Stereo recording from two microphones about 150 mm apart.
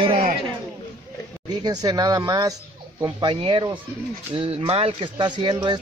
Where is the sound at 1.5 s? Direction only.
25° right (ahead or behind).